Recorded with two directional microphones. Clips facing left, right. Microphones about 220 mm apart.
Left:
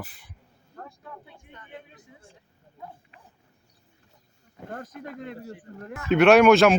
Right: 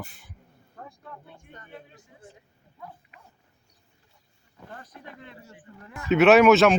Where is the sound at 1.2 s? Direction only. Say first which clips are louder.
Right 1 dB; 45° right (ahead or behind).